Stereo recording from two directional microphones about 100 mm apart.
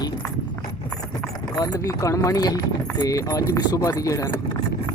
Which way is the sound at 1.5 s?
40° left (ahead or behind).